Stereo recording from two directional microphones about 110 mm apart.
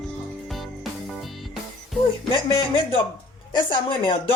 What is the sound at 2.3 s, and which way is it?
Speech, 50° left (ahead or behind).